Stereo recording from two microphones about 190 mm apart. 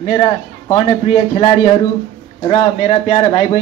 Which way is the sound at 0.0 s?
30° left (ahead or behind).